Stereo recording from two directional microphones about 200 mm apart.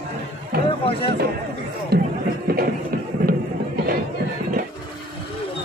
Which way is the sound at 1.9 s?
50° right (ahead or behind).